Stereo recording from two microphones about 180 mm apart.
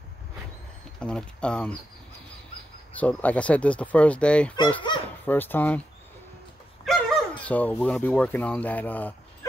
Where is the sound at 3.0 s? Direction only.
10° left (ahead or behind).